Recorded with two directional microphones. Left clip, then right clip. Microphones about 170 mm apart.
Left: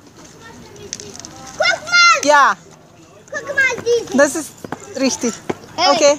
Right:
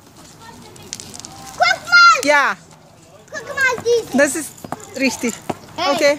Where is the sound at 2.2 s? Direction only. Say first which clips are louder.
Left 3 dB; 5° right (ahead or behind).